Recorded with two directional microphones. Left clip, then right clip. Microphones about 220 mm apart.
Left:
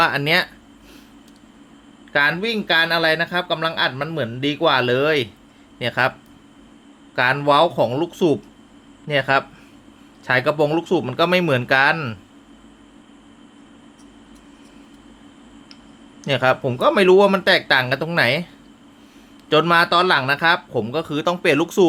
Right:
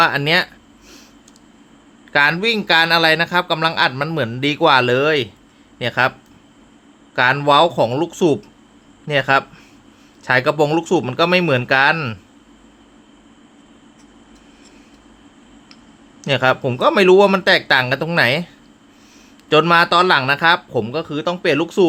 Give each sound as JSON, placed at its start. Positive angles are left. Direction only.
{"t": 0.0, "sound": "speech", "side_deg": -10}
{"t": 2.1, "sound": "speech", "side_deg": -15}
{"t": 7.2, "sound": "speech", "side_deg": -10}
{"t": 16.2, "sound": "speech", "side_deg": -10}